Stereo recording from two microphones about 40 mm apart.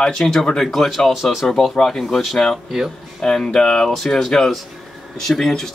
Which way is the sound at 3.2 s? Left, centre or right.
Centre.